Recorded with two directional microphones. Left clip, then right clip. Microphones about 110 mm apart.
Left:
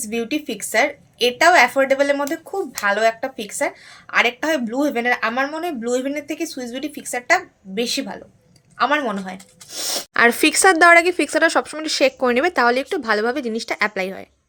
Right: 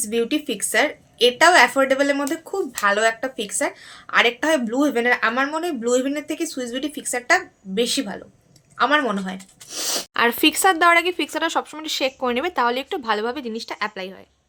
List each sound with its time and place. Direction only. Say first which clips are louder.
0.1 s a woman's voice: right 2 dB; 5° right (ahead or behind)
10.2 s speech: left 4 dB; 30° left (ahead or behind)
13.5 s speech: left 6 dB; 40° left (ahead or behind)